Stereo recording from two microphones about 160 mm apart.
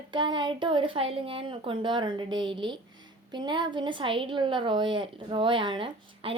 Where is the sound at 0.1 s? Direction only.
30° right (ahead or behind).